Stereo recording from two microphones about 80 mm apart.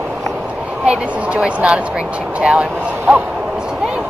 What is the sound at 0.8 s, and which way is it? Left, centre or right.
Speech, centre.